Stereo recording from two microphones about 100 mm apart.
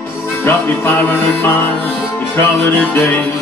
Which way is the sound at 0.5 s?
20° left (ahead or behind).